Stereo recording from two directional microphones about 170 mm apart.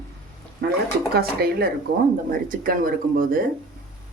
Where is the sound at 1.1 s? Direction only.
65° right (ahead or behind).